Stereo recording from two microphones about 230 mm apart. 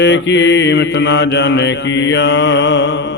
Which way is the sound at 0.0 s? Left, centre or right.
Left.